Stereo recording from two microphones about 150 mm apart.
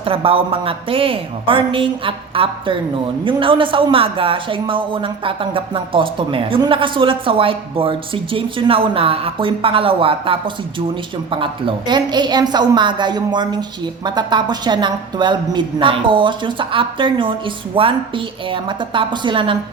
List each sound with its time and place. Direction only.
0.0 s a woman's voice: 40° right (ahead or behind)